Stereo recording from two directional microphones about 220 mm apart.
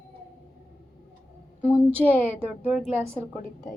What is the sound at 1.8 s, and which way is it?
A woman's voice, 10° right (ahead or behind).